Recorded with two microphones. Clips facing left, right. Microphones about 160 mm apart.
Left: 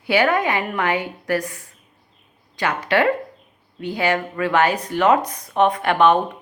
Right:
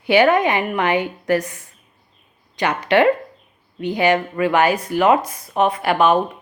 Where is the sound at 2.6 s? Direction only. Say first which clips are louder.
Right 3 dB; 20° right (ahead or behind).